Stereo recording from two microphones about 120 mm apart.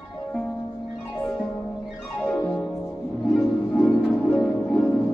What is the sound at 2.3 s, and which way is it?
Music, 10° left (ahead or behind).